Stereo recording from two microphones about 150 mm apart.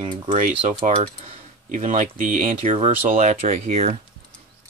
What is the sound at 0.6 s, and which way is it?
Speech, 50° right (ahead or behind).